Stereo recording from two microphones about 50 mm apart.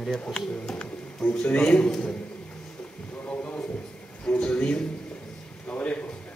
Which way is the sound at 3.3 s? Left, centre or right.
Left.